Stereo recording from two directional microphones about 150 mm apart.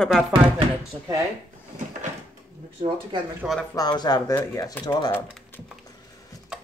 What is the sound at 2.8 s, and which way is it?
Speech, 40° right (ahead or behind).